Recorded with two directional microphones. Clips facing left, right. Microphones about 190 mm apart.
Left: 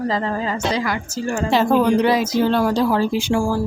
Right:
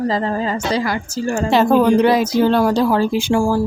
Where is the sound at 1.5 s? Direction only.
55° right (ahead or behind).